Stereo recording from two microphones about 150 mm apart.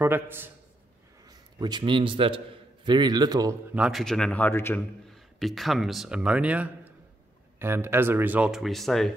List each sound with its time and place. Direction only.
0.0 s speech: 15° right (ahead or behind)
1.2 s a man's voice: 25° right (ahead or behind)
3.7 s speech: 5° right (ahead or behind); by 4.7 s 15° left (ahead or behind)
4.7 s speech: centre (ahead or behind)